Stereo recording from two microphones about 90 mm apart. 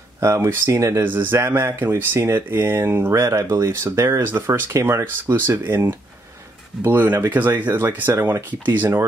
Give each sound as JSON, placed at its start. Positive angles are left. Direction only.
{"t": 0.2, "sound": "speech", "side_deg": -30}
{"t": 1.0, "sound": "speech", "side_deg": -20}